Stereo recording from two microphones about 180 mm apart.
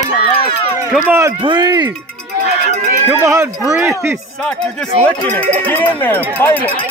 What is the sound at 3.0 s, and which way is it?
Speech, 15° right (ahead or behind).